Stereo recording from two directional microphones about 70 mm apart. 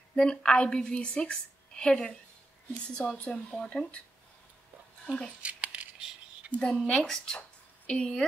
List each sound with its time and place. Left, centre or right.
0.1 s a woman's voice: centre
5.0 s speech: centre
5.4 s a sound: centre
6.5 s a woman's voice: centre